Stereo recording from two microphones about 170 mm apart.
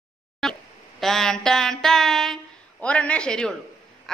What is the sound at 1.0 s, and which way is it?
A man's voice, 5° left (ahead or behind).